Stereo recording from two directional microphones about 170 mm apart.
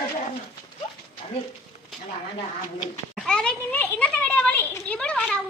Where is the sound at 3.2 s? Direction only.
5° left (ahead or behind).